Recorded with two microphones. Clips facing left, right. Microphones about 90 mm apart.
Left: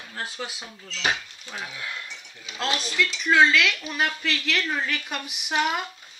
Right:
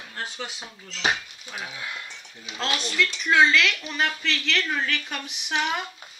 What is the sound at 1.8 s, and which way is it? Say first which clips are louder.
Speech: even; 20° right (ahead or behind).